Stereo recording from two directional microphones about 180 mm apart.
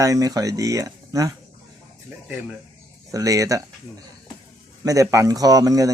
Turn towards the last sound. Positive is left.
turn(degrees=-20)  # may be behind; listen again after turning